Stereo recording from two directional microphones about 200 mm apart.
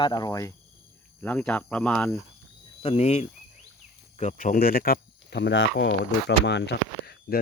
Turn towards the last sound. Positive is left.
turn(degrees=50)  # may be behind; listen again after turning